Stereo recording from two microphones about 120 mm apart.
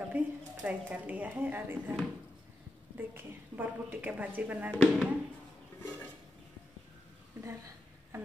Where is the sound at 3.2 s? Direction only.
15° right (ahead or behind).